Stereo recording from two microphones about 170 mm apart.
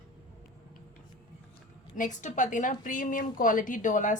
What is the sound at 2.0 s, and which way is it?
A woman's voice, 45° left (ahead or behind).